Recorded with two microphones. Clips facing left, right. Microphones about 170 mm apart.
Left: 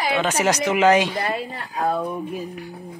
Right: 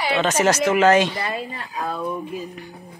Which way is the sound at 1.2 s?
60° left (ahead or behind).